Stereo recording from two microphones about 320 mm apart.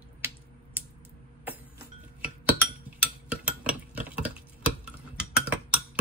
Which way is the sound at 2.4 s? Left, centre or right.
Centre.